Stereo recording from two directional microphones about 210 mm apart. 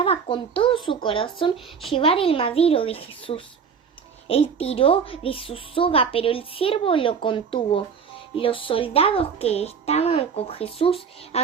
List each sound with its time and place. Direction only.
0.0 s a child's voice: 25° left (ahead or behind)